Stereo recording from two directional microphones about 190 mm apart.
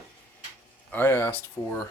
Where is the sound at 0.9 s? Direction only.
10° left (ahead or behind).